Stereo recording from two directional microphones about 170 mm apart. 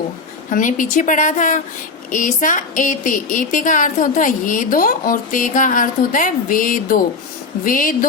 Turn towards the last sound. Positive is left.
turn(degrees=55)  # may be behind; listen again after turning